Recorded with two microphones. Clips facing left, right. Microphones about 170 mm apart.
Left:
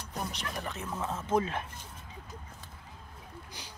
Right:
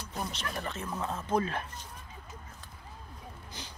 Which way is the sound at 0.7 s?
10° left (ahead or behind).